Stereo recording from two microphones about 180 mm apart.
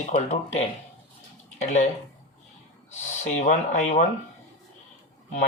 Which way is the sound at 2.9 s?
40° left (ahead or behind).